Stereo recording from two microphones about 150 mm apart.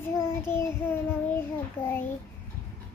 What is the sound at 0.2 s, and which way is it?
Child singing, 15° left (ahead or behind).